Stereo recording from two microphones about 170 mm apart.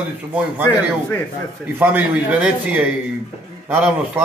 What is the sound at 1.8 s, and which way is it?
Speech, 10° right (ahead or behind).